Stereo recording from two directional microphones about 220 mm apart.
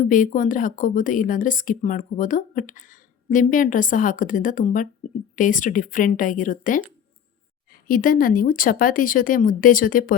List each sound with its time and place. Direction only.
0.0 s a woman's voice: 35° left (ahead or behind)
7.9 s a woman's voice: 40° left (ahead or behind)